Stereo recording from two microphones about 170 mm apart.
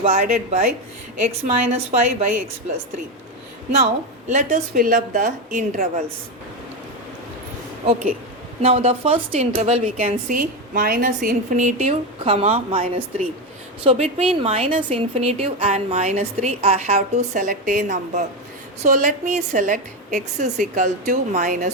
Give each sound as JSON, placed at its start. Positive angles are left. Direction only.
{"t": 0.0, "sound": "a woman's voice", "side_deg": -45}
{"t": 4.3, "sound": "a woman's voice", "side_deg": -45}
{"t": 8.6, "sound": "a woman's voice", "side_deg": -35}
{"t": 10.2, "sound": "a woman's voice", "side_deg": -55}